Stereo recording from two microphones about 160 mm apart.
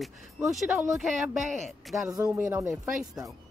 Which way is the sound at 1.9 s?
15° right (ahead or behind).